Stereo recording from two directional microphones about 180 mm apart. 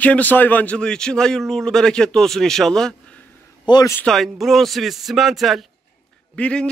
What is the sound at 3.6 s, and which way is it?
Speech, 25° left (ahead or behind).